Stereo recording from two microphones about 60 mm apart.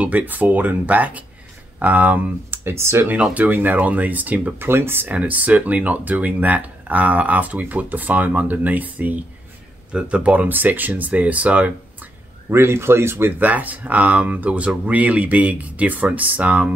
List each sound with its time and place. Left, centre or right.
0.0 s speech: right
2.6 s speech: right
3.3 s speech: right
4.6 s speech: right
5.1 s speech: right
12.4 s speech: right
13.5 s speech: right